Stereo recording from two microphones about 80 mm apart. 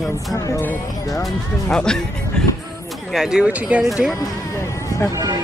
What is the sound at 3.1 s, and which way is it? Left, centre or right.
Speech, centre.